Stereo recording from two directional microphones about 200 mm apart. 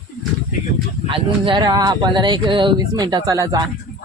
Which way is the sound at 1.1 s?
25° right (ahead or behind).